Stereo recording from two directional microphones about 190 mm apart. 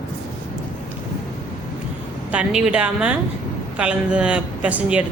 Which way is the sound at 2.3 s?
5° right (ahead or behind).